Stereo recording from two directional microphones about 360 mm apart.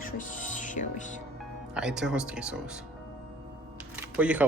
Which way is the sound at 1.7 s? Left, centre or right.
Centre.